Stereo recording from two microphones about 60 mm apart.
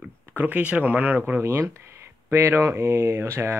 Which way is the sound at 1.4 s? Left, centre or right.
Right.